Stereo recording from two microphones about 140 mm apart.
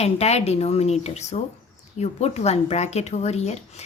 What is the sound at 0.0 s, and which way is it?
Speech, 50° left (ahead or behind).